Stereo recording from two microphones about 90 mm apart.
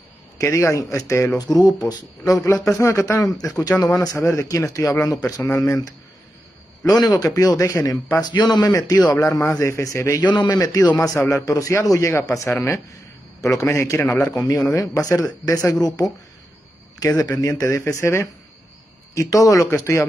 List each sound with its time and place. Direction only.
0.4 s speech: 30° left (ahead or behind)
1.5 s speech: 5° left (ahead or behind)
1.9 s speech: 40° left (ahead or behind)
7.0 s speech: 50° left (ahead or behind)
8.2 s a man's voice: 50° left (ahead or behind)
9.1 s speech: 35° left (ahead or behind)
10.1 s speech: 55° left (ahead or behind)
10.5 s speech: 40° left (ahead or behind)
13.4 s a man's voice: 35° left (ahead or behind)
14.3 s a man's voice: 40° left (ahead or behind)